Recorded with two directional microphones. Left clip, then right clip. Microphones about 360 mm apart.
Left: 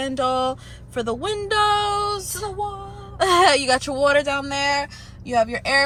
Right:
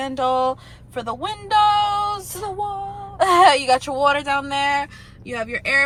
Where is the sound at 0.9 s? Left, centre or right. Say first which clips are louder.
Left 2 dB; centre.